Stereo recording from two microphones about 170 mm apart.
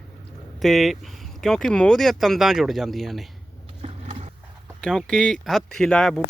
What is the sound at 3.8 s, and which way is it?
Skateboard, 40° right (ahead or behind).